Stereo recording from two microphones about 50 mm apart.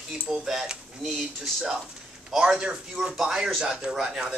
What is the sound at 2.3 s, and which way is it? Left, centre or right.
Speech, centre.